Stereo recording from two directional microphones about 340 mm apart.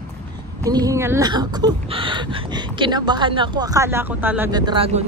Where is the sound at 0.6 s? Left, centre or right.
Centre.